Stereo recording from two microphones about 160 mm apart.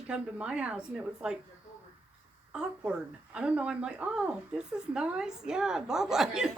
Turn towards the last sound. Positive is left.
turn(degrees=-5)  # may be behind; listen again after turning